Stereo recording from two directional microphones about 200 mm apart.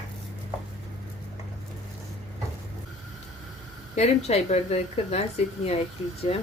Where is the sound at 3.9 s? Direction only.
35° left (ahead or behind).